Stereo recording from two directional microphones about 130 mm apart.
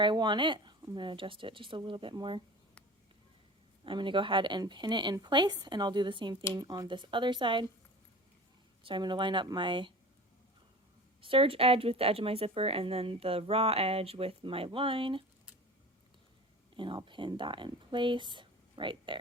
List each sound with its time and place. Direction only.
0.0 s speech: 35° right (ahead or behind)
3.8 s speech: 40° right (ahead or behind)
8.8 s speech: 40° right (ahead or behind)
11.2 s speech: 45° right (ahead or behind)
16.7 s speech: 40° right (ahead or behind)